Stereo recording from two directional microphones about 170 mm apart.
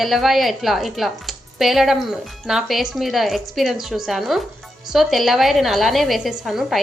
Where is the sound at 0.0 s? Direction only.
Centre (ahead or behind).